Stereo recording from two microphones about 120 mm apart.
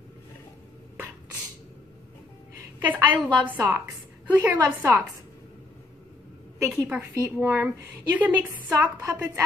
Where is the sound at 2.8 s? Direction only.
15° right (ahead or behind).